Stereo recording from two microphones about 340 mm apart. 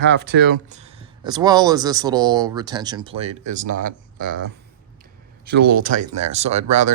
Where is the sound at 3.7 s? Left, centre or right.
Right.